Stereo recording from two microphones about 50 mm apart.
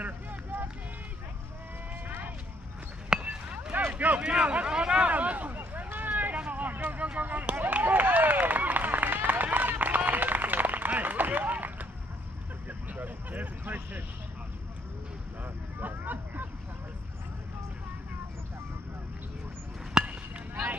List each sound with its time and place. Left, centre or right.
0.0 s run: right
2.0 s vehicle: right
3.2 s a sound: right
4.2 s a sound: right
5.9 s vehicle: right
7.2 s chop: right
7.5 s run: right
12.9 s a sound: right
15.4 s vehicle: right
20.0 s chop: centre